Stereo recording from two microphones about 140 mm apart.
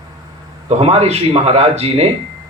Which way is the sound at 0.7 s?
50° right (ahead or behind).